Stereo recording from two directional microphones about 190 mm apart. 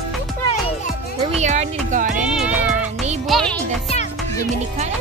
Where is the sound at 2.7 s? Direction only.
35° right (ahead or behind).